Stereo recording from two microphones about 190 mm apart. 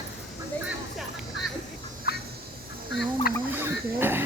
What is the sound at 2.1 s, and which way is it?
Fowl, 60° left (ahead or behind).